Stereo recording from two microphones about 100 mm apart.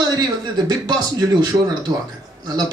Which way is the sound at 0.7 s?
45° right (ahead or behind).